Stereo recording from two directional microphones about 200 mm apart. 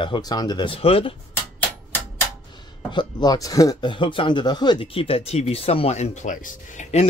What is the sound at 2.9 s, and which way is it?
Speech, 20° left (ahead or behind).